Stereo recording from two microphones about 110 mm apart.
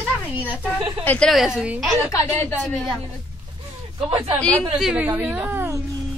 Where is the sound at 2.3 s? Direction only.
15° left (ahead or behind).